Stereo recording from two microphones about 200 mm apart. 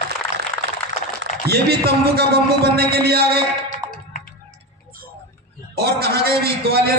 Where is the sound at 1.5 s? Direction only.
55° right (ahead or behind).